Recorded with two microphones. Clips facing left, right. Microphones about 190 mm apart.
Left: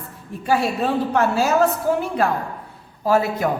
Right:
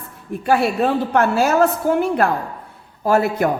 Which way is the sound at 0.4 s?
60° right (ahead or behind).